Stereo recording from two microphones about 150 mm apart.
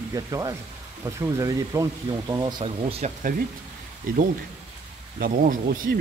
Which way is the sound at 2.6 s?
40° right (ahead or behind).